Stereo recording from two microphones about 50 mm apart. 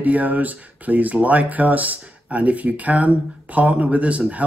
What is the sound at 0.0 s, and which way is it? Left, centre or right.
Speech, right.